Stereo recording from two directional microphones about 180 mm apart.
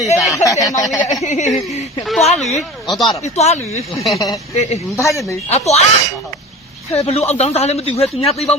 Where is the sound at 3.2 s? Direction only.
40° left (ahead or behind).